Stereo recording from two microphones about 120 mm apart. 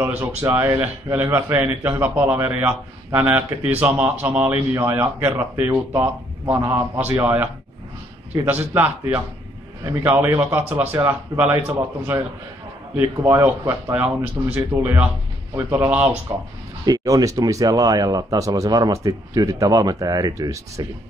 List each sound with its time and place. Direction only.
0.0 s a man's voice: 15° right (ahead or behind)
8.5 s a man's voice: 15° right (ahead or behind)
10.0 s a man's voice: 20° right (ahead or behind)